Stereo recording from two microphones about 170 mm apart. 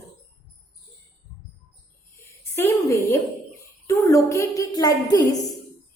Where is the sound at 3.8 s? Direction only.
15° left (ahead or behind).